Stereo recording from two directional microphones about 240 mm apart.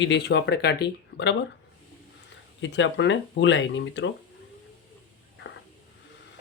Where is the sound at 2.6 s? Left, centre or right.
Left.